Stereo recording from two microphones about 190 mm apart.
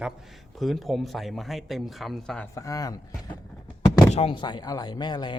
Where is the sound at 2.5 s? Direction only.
15° left (ahead or behind).